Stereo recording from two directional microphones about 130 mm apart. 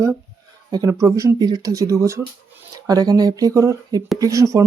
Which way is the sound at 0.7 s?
25° right (ahead or behind).